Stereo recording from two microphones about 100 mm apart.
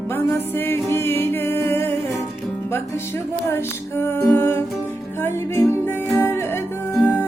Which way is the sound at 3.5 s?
25° left (ahead or behind).